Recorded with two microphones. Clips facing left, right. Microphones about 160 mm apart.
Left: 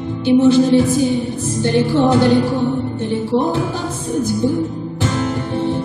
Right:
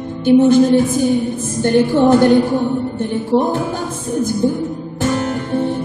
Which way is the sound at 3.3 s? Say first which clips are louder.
Right 3 dB; 45° right (ahead or behind).